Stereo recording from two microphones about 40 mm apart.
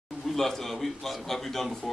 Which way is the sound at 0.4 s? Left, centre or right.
Centre.